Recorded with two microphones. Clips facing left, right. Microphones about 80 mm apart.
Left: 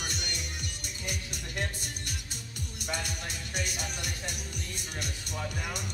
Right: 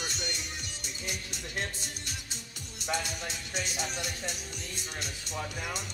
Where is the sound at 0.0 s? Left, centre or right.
Left.